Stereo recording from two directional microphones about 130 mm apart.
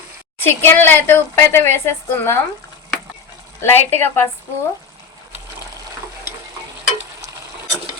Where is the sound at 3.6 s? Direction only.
15° left (ahead or behind).